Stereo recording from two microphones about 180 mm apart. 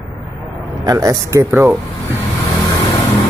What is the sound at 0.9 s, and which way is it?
Speech, 20° right (ahead or behind).